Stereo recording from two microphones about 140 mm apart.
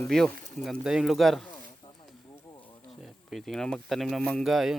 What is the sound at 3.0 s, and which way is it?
Speech, centre (ahead or behind).